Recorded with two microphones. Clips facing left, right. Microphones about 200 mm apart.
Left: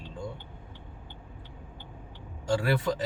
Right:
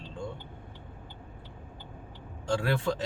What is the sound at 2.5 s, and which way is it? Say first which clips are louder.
Speech: left 2 dB; 5° left (ahead or behind).